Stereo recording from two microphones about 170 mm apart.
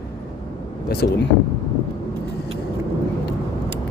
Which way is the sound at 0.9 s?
70° left (ahead or behind).